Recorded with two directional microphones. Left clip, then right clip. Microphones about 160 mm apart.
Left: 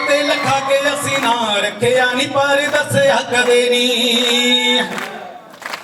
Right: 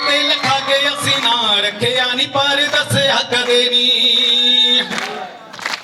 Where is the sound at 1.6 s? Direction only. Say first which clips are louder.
Left 2 dB; 20° left (ahead or behind).